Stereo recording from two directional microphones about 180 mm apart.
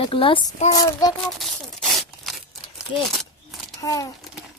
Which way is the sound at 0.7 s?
20° left (ahead or behind).